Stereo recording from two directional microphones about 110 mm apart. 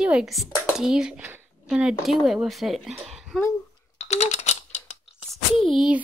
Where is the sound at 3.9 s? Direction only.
90° left.